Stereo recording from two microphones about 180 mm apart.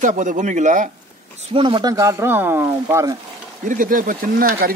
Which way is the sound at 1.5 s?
25° right (ahead or behind).